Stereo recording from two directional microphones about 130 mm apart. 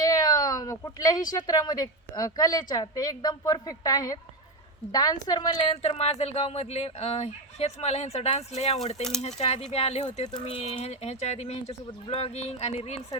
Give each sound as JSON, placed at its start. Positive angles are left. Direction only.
{"t": 0.0, "sound": "a sound", "side_deg": 30}
{"t": 1.3, "sound": "a woman's voice", "side_deg": 30}
{"t": 5.7, "sound": "fowl", "side_deg": 50}
{"t": 9.2, "sound": "speech", "side_deg": 55}